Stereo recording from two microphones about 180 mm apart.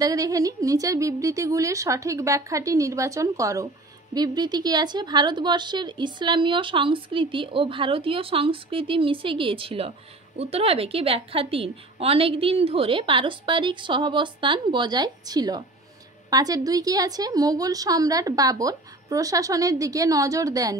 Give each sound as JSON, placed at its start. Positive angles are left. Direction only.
{"t": 0.0, "sound": "speech", "side_deg": -20}